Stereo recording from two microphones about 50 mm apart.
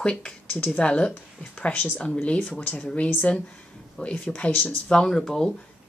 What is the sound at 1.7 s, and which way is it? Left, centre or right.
Speech, left.